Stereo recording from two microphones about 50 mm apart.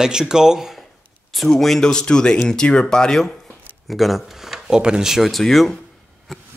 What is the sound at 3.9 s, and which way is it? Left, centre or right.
Speech, centre.